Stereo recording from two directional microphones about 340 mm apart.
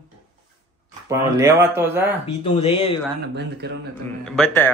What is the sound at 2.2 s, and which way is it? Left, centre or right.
Speech, centre.